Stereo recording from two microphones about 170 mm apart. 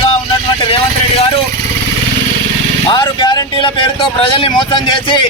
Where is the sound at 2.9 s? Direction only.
25° left (ahead or behind).